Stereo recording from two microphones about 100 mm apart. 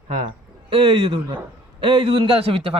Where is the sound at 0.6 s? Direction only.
65° right (ahead or behind).